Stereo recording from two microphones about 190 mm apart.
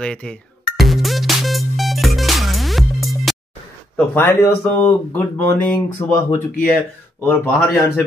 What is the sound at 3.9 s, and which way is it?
A man's voice, 10° left (ahead or behind).